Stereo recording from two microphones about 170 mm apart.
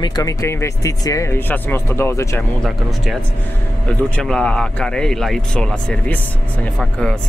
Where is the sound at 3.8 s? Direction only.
5° left (ahead or behind).